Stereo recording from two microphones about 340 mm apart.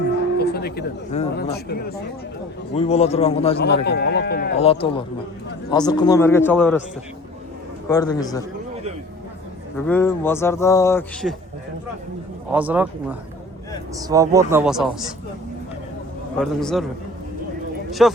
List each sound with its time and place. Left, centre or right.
0.3 s speech: left
3.6 s speech: left; by 6.8 s centre
7.9 s speech: centre
9.8 s speech: centre
12.5 s speech: centre
16.4 s speech: centre
18.0 s speech: centre